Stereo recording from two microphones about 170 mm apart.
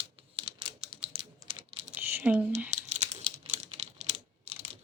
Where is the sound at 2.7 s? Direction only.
40° right (ahead or behind).